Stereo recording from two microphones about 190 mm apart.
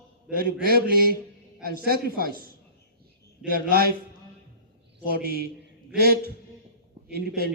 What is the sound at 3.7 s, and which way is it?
Mantra, 55° right (ahead or behind).